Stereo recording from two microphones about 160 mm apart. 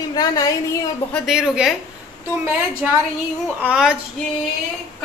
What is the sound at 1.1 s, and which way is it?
Speech, centre (ahead or behind).